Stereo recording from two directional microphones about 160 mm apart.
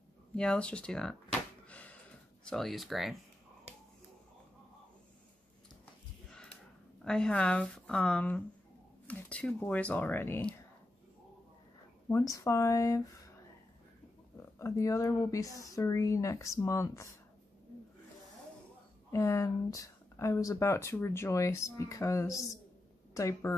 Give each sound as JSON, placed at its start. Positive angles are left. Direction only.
{"t": 0.4, "sound": "a woman's voice", "side_deg": 5}
{"t": 1.7, "sound": "a sound", "side_deg": 10}
{"t": 2.4, "sound": "speech", "side_deg": 0}
{"t": 7.0, "sound": "a woman's voice", "side_deg": 5}
{"t": 12.1, "sound": "speech", "side_deg": 20}
{"t": 14.6, "sound": "speech", "side_deg": 20}
{"t": 19.1, "sound": "speech", "side_deg": 20}